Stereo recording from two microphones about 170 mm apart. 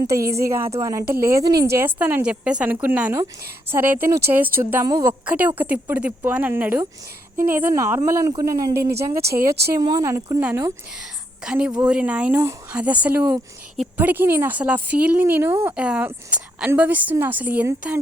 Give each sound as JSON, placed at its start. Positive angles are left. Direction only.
{"t": 0.4, "sound": "a woman's voice", "side_deg": -15}
{"t": 5.2, "sound": "a woman's voice", "side_deg": -10}
{"t": 9.2, "sound": "speech", "side_deg": -65}
{"t": 9.7, "sound": "a woman's voice", "side_deg": -20}
{"t": 11.4, "sound": "a woman's voice", "side_deg": -5}